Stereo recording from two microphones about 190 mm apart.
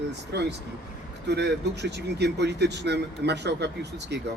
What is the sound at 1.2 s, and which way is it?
A man's voice, 60° right (ahead or behind).